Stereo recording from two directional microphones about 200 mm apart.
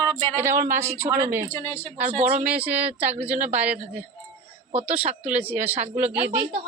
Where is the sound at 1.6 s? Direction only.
10° left (ahead or behind).